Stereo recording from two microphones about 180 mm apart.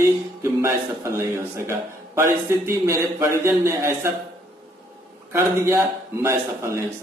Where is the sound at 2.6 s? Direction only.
15° right (ahead or behind).